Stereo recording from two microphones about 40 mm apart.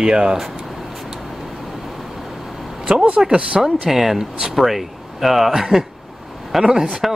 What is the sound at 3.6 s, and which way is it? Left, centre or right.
Speech, centre.